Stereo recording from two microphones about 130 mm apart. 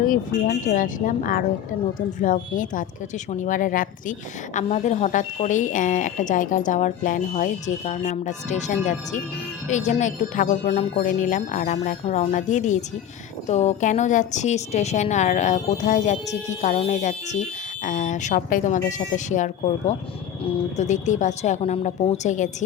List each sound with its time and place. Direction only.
0.0 s speech: 85° left
4.5 s a woman's voice: 70° left (ahead or behind)
13.5 s a woman's voice: 60° left (ahead or behind)
21.6 s a woman's voice: 50° left (ahead or behind); by 22.4 s 65° left (ahead or behind)